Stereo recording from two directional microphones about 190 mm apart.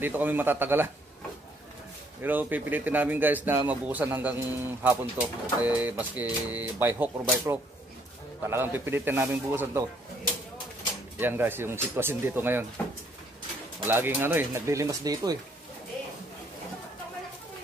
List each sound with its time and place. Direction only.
0.0 s a man's voice: 10° right (ahead or behind)
2.2 s a man's voice: 10° right (ahead or behind)
11.1 s a man's voice: 10° right (ahead or behind)
13.8 s a man's voice: 10° right (ahead or behind)